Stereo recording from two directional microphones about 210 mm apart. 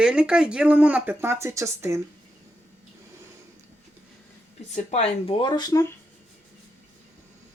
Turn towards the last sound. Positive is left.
turn(degrees=15)  # may be behind; listen again after turning